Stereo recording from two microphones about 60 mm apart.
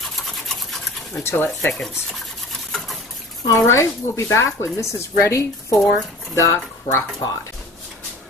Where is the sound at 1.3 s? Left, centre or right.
Left.